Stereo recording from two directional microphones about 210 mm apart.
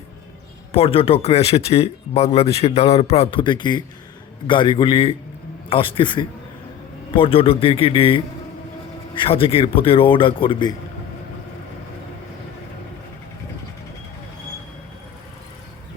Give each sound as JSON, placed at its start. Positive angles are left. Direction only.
{"t": 0.7, "sound": "speech", "side_deg": 25}